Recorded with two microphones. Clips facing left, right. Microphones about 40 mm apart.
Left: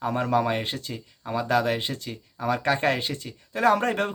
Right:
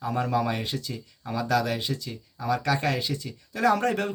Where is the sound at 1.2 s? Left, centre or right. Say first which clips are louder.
Left 2 dB; left.